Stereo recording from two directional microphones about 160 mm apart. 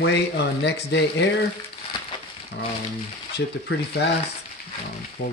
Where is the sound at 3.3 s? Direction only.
90° left.